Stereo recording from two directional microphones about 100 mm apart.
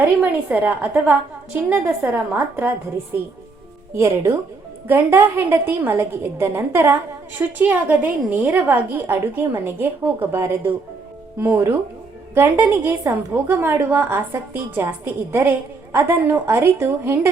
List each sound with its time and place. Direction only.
0.2 s a woman's voice: 20° right (ahead or behind)
3.9 s a woman's voice: 30° right (ahead or behind)
7.3 s a woman's voice: 20° right (ahead or behind)